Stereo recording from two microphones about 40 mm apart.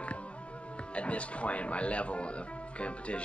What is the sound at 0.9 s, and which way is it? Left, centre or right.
Speech, left.